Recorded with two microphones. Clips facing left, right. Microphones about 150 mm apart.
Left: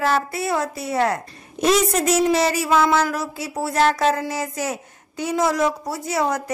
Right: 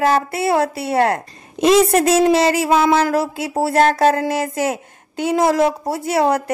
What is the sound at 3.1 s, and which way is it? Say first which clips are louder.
Speech: right 8 dB; 30° right (ahead or behind).